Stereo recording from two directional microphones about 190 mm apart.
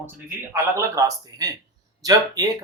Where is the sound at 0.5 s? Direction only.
15° right (ahead or behind).